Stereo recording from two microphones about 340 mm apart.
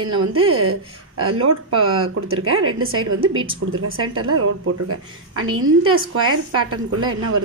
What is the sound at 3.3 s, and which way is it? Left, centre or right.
Speech, centre.